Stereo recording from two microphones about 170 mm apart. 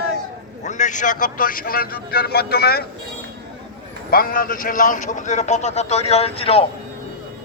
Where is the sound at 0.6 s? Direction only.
45° left (ahead or behind); by 2.8 s 65° left (ahead or behind).